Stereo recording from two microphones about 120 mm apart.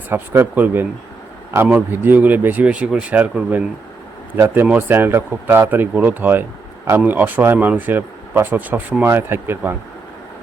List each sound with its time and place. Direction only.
0.1 s speech: 15° right (ahead or behind)